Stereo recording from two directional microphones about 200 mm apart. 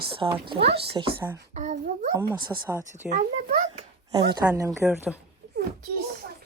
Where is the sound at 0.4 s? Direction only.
25° right (ahead or behind).